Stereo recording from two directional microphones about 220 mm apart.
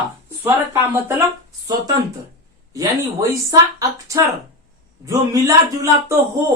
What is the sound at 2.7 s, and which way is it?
Speech, 15° right (ahead or behind).